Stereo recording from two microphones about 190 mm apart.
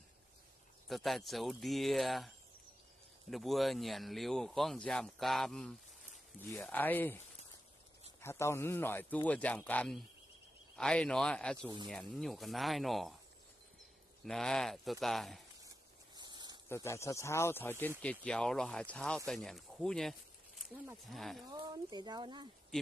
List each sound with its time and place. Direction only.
0.8 s a man's voice: centre (ahead or behind)
8.2 s a man's voice: 15° left (ahead or behind)
14.2 s speech: 5° left (ahead or behind)
16.2 s a sound: 20° right (ahead or behind)
16.6 s a man's voice: 15° left (ahead or behind)
21.5 s speech: 20° right (ahead or behind)